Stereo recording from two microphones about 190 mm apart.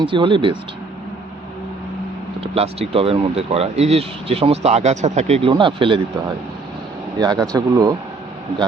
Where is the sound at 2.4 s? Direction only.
30° right (ahead or behind).